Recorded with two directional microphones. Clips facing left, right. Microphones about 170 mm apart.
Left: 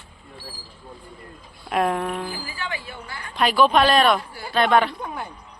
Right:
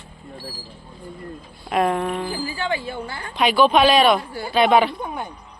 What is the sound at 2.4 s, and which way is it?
Speech, 30° right (ahead or behind).